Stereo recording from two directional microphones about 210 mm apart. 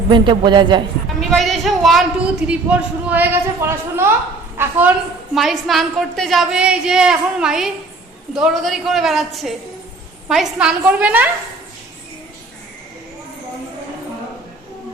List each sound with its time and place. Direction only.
0.1 s speech: 20° right (ahead or behind)
1.2 s a woman's voice: centre (ahead or behind)
5.3 s a woman's voice: centre (ahead or behind)